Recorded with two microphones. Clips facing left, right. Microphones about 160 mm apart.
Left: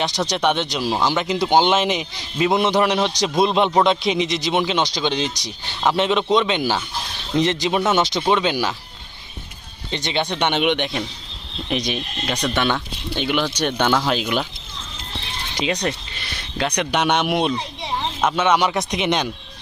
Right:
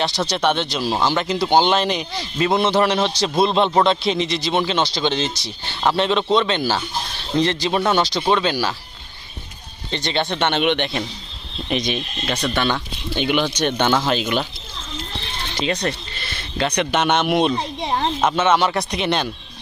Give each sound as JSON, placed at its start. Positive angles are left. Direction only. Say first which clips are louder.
{"t": 0.0, "sound": "a man's voice", "louder": "even", "side_deg": 15}
{"t": 9.9, "sound": "a man's voice", "louder": "right 1 dB", "side_deg": 15}
{"t": 12.7, "sound": "speech", "louder": "right 1 dB", "side_deg": 0}
{"t": 15.6, "sound": "speech", "louder": "even", "side_deg": 15}
{"t": 17.5, "sound": "a sound", "louder": "right 3 dB", "side_deg": -55}
{"t": 18.3, "sound": "a man's voice", "louder": "left 1 dB", "side_deg": 10}